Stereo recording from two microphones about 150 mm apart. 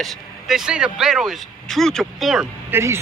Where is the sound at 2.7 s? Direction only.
15° right (ahead or behind).